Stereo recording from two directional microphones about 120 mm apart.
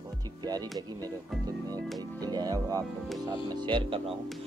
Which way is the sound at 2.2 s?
35° right (ahead or behind).